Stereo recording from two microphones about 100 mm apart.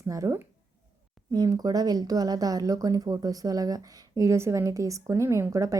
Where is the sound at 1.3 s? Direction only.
40° right (ahead or behind).